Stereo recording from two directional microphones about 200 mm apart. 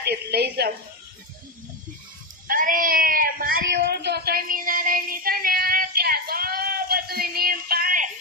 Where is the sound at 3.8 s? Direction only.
55° right (ahead or behind).